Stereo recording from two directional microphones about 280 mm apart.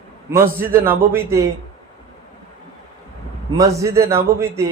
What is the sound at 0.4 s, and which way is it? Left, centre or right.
Speech, right.